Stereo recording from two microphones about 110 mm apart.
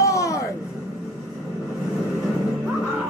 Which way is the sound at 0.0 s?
30° left (ahead or behind).